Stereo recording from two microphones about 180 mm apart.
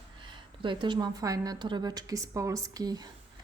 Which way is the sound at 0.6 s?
25° right (ahead or behind).